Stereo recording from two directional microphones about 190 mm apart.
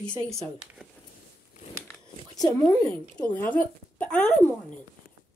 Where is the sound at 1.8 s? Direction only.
20° left (ahead or behind).